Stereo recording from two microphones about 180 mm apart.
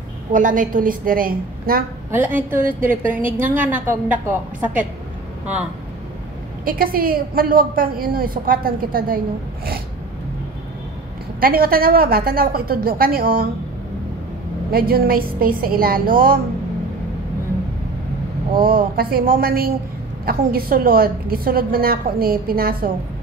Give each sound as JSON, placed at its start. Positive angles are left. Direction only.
{"t": 0.3, "sound": "a woman's voice", "side_deg": -45}
{"t": 2.0, "sound": "a woman's voice", "side_deg": -10}
{"t": 6.6, "sound": "a woman's voice", "side_deg": -55}
{"t": 11.3, "sound": "a woman's voice", "side_deg": -55}
{"t": 14.7, "sound": "a woman's voice", "side_deg": -55}
{"t": 18.9, "sound": "a woman's voice", "side_deg": -55}